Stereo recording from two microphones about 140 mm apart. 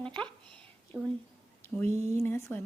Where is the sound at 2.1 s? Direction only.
20° left (ahead or behind).